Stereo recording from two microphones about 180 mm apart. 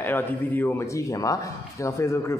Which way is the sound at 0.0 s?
10° left (ahead or behind).